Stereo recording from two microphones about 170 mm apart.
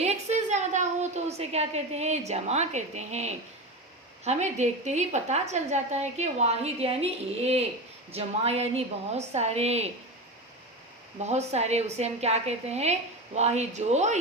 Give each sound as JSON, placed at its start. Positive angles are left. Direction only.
{"t": 0.0, "sound": "a woman's voice", "side_deg": -40}
{"t": 11.2, "sound": "a woman's voice", "side_deg": -40}